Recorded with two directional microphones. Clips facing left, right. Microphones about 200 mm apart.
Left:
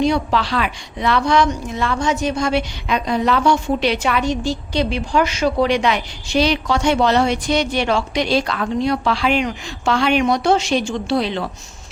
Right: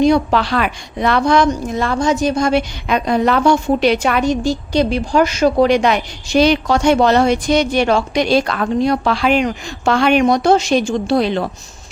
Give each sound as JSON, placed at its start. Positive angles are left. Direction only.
{"t": 0.0, "sound": "a woman's voice", "side_deg": -50}